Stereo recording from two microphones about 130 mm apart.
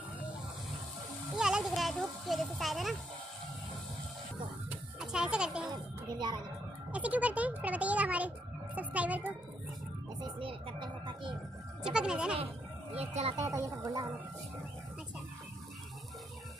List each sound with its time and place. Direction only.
1.3 s a sound: 5° right (ahead or behind)
4.6 s a sound: 5° right (ahead or behind)
5.7 s music: 35° right (ahead or behind)
6.9 s a child's voice: 10° right (ahead or behind)
10.2 s speech: 40° right (ahead or behind)
11.8 s a child's voice: 5° right (ahead or behind)
12.9 s speech: 55° right (ahead or behind)
13.4 s speech: 25° right (ahead or behind)